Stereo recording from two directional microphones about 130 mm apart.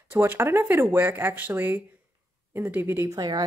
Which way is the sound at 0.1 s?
15° right (ahead or behind).